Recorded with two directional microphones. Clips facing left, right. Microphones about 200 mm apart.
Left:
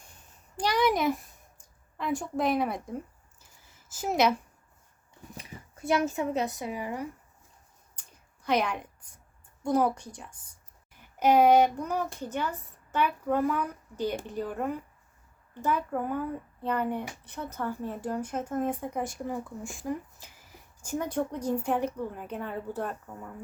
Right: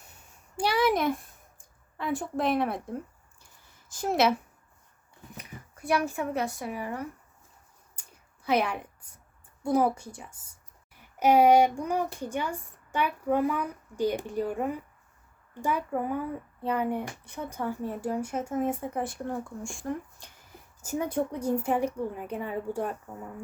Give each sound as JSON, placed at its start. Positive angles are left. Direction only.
{"t": 0.0, "sound": "a sound", "side_deg": -10}
{"t": 2.0, "sound": "a woman's voice", "side_deg": 0}
{"t": 5.4, "sound": "speech", "side_deg": 25}
{"t": 8.4, "sound": "a woman's voice", "side_deg": -5}
{"t": 20.8, "sound": "speech", "side_deg": -10}